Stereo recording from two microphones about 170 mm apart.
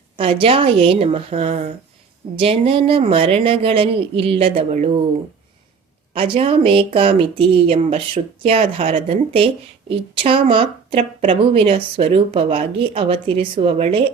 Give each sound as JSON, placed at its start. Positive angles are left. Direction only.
{"t": 0.2, "sound": "a woman's voice", "side_deg": -30}
{"t": 6.1, "sound": "a woman's voice", "side_deg": -35}